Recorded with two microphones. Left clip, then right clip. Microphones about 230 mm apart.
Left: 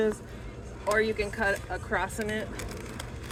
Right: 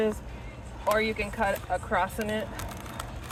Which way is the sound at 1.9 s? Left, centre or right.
Right.